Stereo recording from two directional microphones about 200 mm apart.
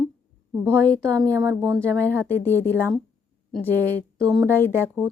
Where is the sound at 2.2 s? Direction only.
10° left (ahead or behind).